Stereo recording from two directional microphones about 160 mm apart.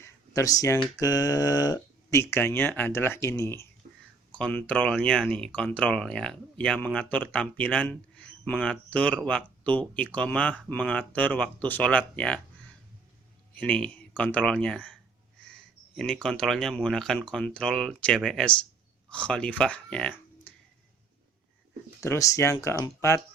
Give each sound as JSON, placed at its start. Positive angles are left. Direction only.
{"t": 0.0, "sound": "computer keyboard", "side_deg": 20}
{"t": 0.9, "sound": "speech", "side_deg": 20}
{"t": 13.6, "sound": "speech", "side_deg": 5}
{"t": 16.2, "sound": "speech", "side_deg": 5}
{"t": 22.0, "sound": "speech", "side_deg": 20}